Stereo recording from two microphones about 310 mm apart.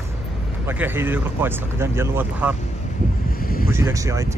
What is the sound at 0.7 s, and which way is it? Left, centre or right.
Speech, centre.